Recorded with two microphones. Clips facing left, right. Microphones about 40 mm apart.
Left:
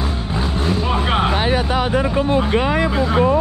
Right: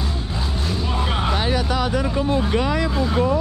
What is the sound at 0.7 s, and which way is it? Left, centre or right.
Vehicle, left.